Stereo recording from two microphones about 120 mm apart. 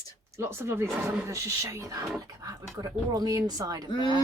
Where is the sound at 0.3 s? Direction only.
20° right (ahead or behind).